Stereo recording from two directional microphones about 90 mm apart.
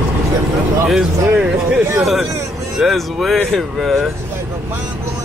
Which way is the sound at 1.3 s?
10° right (ahead or behind).